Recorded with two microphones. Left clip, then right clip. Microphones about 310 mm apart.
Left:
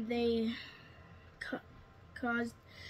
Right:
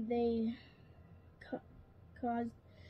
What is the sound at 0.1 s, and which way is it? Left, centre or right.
Speech, centre.